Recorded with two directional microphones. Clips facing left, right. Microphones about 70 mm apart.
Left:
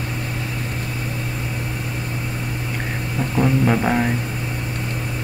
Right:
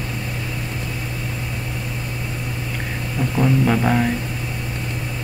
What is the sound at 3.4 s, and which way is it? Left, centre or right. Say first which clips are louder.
Speech: even; centre.